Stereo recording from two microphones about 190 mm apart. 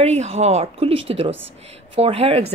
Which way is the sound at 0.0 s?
35° right (ahead or behind).